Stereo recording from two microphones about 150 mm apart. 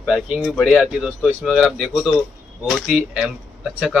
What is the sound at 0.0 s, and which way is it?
Speech, 5° right (ahead or behind).